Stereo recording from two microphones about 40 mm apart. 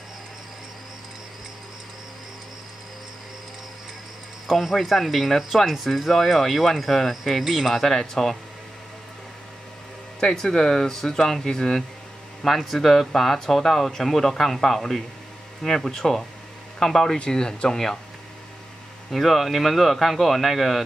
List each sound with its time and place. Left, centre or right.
4.5 s speech: centre
10.2 s speech: centre
19.0 s speech: centre